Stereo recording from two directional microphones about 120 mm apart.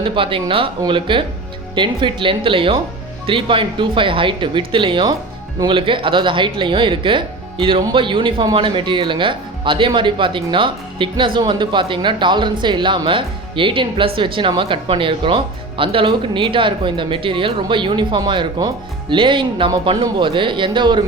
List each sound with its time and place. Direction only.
0.0 s speech: 45° right (ahead or behind)